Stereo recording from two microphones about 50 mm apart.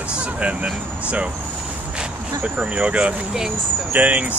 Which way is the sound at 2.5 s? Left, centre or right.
Right.